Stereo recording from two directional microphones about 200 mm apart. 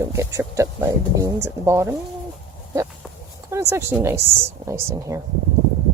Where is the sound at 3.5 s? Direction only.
15° right (ahead or behind).